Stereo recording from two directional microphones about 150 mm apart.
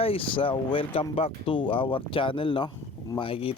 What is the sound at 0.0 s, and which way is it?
Speech, 40° left (ahead or behind).